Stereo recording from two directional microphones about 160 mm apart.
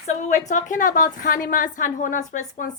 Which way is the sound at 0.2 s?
45° left (ahead or behind).